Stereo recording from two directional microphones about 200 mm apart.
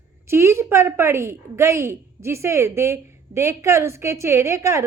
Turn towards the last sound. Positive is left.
turn(degrees=-15)  # may be behind; listen again after turning